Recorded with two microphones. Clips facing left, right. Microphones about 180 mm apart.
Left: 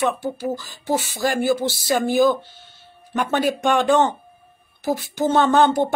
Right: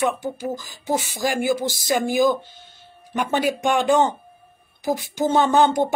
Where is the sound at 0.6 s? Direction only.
15° right (ahead or behind).